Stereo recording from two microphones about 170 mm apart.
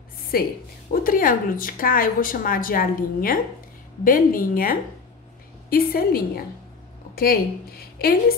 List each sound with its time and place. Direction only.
0.3 s speech: 60° left (ahead or behind)
7.8 s a woman's voice: 60° left (ahead or behind)